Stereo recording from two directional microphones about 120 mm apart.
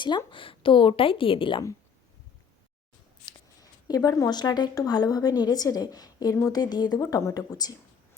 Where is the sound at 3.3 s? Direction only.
30° left (ahead or behind).